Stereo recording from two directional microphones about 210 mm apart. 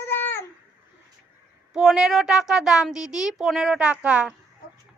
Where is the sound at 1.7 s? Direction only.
Centre (ahead or behind).